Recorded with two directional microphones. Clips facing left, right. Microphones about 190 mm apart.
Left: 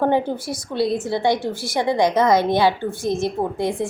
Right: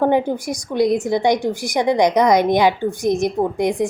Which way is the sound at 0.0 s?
15° right (ahead or behind).